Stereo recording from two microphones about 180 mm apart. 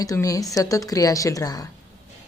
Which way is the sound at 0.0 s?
20° left (ahead or behind).